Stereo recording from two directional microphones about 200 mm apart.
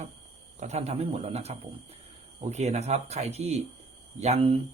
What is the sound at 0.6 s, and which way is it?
Speech, 35° right (ahead or behind).